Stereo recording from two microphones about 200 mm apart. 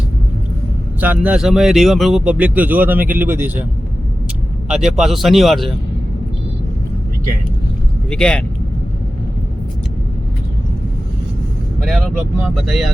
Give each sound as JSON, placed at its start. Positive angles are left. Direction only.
{"t": 0.9, "sound": "speech", "side_deg": -10}
{"t": 4.7, "sound": "speech", "side_deg": -5}
{"t": 8.1, "sound": "speech", "side_deg": 5}
{"t": 11.8, "sound": "speech", "side_deg": 0}